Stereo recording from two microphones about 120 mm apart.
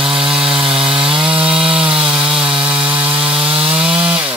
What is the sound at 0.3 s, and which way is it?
Chainsaw, 5° right (ahead or behind).